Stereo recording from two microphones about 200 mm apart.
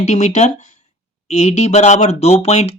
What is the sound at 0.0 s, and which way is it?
Speech, 35° left (ahead or behind).